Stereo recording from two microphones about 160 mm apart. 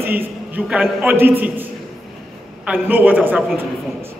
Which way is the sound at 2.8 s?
10° right (ahead or behind).